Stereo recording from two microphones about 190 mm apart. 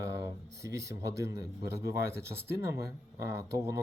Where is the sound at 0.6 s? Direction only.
15° right (ahead or behind).